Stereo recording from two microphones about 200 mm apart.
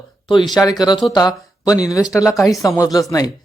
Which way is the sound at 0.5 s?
20° left (ahead or behind).